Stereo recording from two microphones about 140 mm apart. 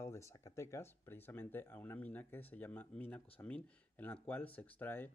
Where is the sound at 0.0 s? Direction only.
20° left (ahead or behind).